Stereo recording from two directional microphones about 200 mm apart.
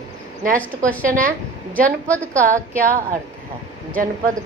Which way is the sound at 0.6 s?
5° left (ahead or behind).